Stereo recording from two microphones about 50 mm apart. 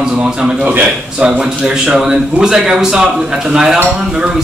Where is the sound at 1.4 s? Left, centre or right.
Centre.